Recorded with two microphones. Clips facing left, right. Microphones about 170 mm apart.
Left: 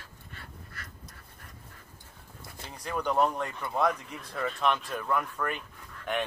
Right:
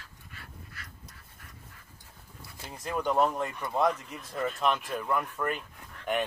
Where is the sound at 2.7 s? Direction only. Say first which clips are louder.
Right 1 dB; centre (ahead or behind).